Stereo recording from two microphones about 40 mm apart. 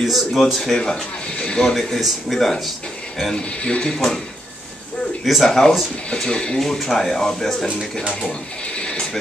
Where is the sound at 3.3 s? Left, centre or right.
Left.